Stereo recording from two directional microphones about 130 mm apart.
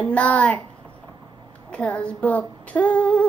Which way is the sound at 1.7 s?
10° left (ahead or behind).